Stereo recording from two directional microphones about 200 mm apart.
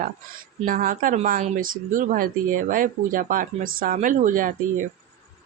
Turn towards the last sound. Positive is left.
turn(degrees=-40)  # may be behind; listen again after turning